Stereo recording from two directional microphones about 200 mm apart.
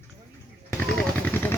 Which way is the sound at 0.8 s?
5° left (ahead or behind).